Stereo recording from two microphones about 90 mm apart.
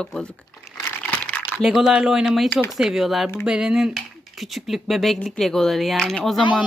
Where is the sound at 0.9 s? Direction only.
20° left (ahead or behind).